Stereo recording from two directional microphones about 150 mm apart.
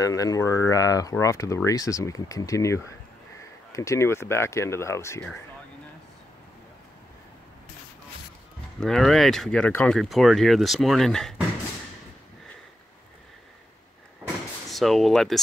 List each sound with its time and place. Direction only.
0.0 s speech: 25° left (ahead or behind)
8.7 s speech: 5° left (ahead or behind)
14.7 s speech: centre (ahead or behind)